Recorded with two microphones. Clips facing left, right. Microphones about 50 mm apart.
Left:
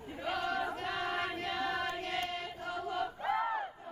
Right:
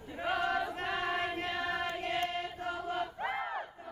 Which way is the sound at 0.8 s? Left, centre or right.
Right.